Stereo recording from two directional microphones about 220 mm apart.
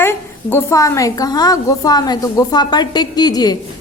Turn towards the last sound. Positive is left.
turn(degrees=20)  # may be behind; listen again after turning